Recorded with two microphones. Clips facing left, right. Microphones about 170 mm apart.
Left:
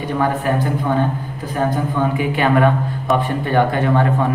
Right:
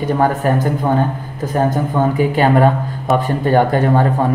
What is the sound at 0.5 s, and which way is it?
A man's voice, 45° right (ahead or behind).